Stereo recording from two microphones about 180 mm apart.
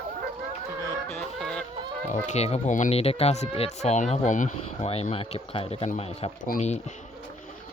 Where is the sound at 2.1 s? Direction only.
40° left (ahead or behind).